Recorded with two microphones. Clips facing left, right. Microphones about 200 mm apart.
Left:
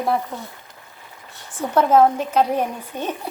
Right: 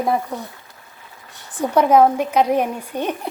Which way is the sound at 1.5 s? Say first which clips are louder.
Right 2 dB; 15° right (ahead or behind).